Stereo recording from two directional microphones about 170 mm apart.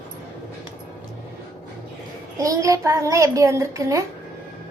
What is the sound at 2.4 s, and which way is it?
A child's voice, 20° right (ahead or behind).